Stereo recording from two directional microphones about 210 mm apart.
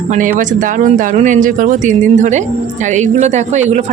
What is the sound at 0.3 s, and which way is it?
Speech, 40° right (ahead or behind).